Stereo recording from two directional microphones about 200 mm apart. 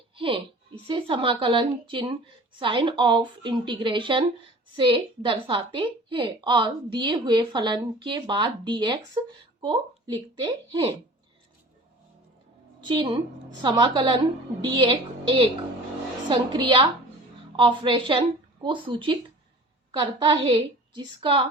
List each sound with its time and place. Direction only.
0.2 s a woman's voice: 25° right (ahead or behind)
12.8 s a woman's voice: 25° right (ahead or behind)